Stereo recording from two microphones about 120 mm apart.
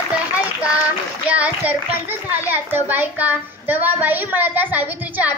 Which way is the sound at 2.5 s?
15° right (ahead or behind).